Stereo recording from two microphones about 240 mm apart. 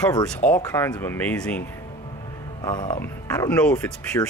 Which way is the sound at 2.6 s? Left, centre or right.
Centre.